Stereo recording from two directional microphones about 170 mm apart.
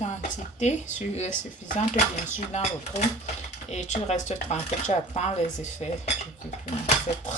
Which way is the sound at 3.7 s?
40° left (ahead or behind).